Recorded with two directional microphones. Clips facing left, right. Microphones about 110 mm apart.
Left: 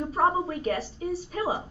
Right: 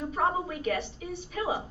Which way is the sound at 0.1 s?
35° left (ahead or behind).